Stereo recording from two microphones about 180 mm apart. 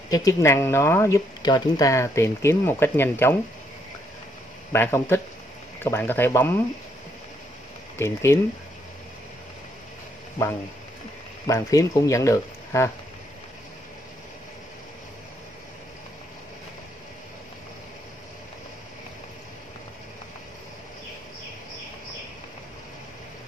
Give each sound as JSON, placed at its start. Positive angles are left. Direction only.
{"t": 0.1, "sound": "speech", "side_deg": 20}
{"t": 4.7, "sound": "speech", "side_deg": 10}
{"t": 8.0, "sound": "speech", "side_deg": 15}
{"t": 11.4, "sound": "speech", "side_deg": 20}